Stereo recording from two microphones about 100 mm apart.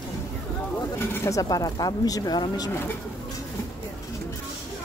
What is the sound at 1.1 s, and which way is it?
Speech, 30° left (ahead or behind).